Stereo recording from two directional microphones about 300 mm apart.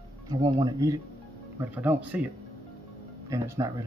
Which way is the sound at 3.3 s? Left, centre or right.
Centre.